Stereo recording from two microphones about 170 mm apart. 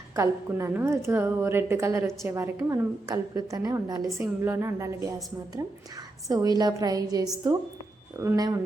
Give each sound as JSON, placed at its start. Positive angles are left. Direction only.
{"t": 0.2, "sound": "a woman's voice", "side_deg": -15}
{"t": 6.2, "sound": "a woman's voice", "side_deg": -20}